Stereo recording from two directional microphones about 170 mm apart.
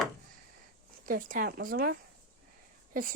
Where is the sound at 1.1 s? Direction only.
55° right (ahead or behind).